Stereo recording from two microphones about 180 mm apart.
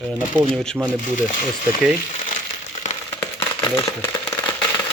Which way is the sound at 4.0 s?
20° left (ahead or behind).